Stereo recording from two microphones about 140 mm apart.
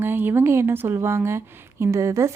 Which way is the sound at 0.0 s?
15° right (ahead or behind).